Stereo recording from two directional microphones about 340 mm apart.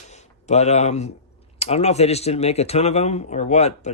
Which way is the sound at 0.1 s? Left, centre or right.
Centre.